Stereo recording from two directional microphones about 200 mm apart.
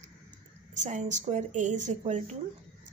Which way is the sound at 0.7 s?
35° right (ahead or behind).